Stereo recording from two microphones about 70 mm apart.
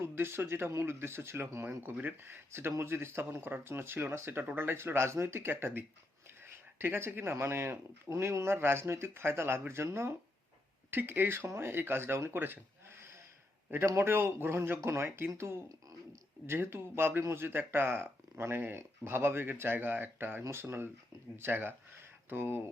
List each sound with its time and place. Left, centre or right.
0.0 s speech: right
13.7 s speech: right